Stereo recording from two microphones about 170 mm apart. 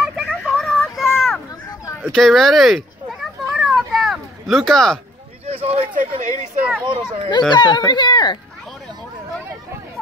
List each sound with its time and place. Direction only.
0.0 s a sound: centre (ahead or behind)
2.1 s children playing: centre (ahead or behind)
5.5 s a sound: 35° right (ahead or behind)
5.9 s speech: 50° right (ahead or behind)
6.8 s a child's voice: 25° right (ahead or behind)
7.2 s speech: 25° left (ahead or behind)